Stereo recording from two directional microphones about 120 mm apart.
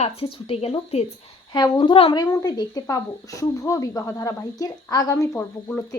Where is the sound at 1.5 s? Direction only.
40° left (ahead or behind).